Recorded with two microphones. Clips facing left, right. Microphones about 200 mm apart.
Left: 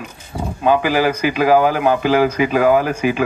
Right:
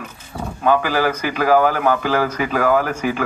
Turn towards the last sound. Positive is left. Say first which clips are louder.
# left 3 dB
turn(degrees=15)  # may be behind; listen again after turning